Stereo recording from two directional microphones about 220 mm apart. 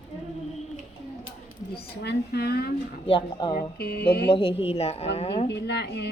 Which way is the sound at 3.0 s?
25° left (ahead or behind).